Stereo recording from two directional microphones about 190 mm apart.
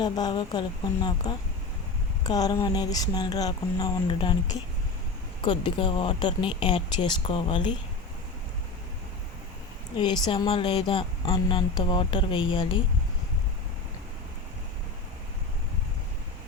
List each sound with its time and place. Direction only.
0.0 s speech: 20° left (ahead or behind)
10.0 s speech: 25° left (ahead or behind)